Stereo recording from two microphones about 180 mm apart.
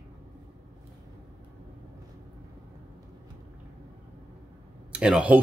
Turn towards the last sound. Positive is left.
turn(degrees=-5)  # may be behind; listen again after turning